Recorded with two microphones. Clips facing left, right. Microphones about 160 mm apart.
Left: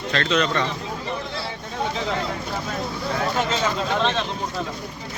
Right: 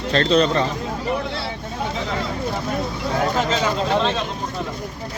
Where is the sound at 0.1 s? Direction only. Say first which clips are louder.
Right 5 dB; 35° right (ahead or behind).